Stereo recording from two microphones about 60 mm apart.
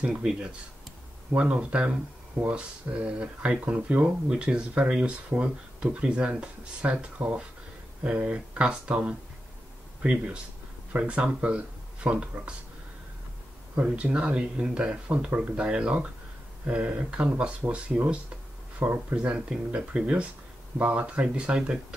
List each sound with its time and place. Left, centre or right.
0.0 s speech: centre
10.0 s speech: centre
13.7 s speech: right